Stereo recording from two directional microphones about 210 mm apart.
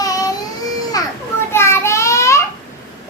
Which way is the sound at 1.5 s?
10° left (ahead or behind).